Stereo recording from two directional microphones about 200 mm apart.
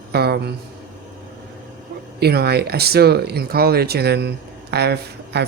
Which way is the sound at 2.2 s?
50° right (ahead or behind).